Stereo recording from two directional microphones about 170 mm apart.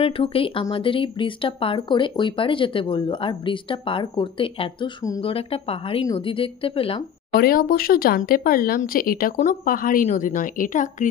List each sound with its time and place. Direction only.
0.0 s speech: 35° left (ahead or behind)
5.2 s speech: 35° left (ahead or behind)
7.3 s speech: 60° left (ahead or behind)